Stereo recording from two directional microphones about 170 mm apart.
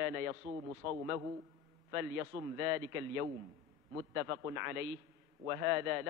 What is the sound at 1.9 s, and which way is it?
A man's voice, 15° right (ahead or behind).